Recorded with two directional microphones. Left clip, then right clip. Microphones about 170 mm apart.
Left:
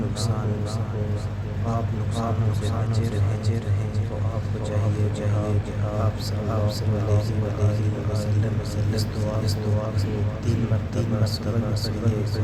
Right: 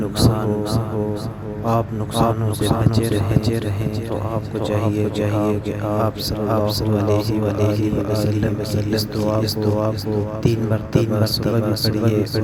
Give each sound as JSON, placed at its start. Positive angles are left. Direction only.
{"t": 0.2, "sound": "a sound", "side_deg": -45}
{"t": 1.6, "sound": "a man's voice", "side_deg": -45}
{"t": 4.7, "sound": "a man's voice", "side_deg": -45}